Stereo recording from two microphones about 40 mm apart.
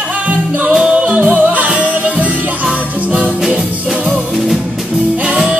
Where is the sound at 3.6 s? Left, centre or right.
Centre.